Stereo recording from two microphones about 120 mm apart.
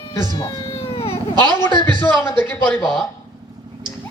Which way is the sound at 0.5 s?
55° left (ahead or behind).